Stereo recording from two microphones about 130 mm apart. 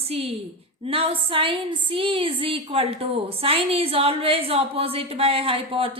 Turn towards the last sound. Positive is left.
turn(degrees=-45)  # may be behind; listen again after turning